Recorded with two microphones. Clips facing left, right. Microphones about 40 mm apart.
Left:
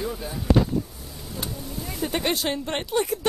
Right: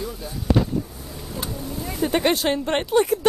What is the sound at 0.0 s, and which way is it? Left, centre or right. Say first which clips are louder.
Speech: left 1 dB; centre.